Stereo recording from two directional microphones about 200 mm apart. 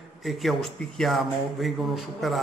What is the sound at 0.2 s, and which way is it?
A man's voice, centre (ahead or behind).